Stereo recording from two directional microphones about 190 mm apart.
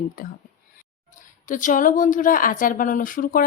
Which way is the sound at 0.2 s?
50° left (ahead or behind).